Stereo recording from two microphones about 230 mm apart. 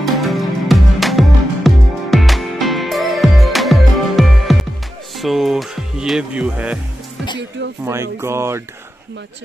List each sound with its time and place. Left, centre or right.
0.0 s music: centre
5.1 s speech: centre
7.8 s speech: centre